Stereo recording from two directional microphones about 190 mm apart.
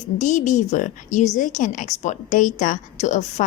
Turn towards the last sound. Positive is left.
turn(degrees=35)  # may be behind; listen again after turning